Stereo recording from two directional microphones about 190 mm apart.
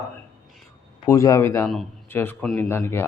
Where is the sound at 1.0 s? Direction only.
15° left (ahead or behind).